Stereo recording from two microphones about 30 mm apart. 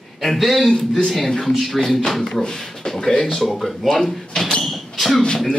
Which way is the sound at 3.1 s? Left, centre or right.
Left.